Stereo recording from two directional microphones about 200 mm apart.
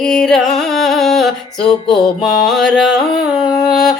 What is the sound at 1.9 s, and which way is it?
Music, 20° left (ahead or behind).